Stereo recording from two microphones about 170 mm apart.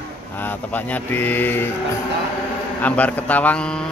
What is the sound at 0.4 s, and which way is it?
Speech, 10° left (ahead or behind).